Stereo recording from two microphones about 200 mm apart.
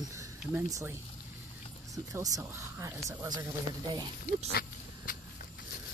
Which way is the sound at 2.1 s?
15° right (ahead or behind).